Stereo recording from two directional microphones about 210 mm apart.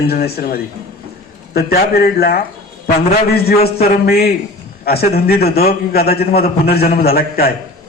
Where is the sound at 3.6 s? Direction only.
50° left (ahead or behind).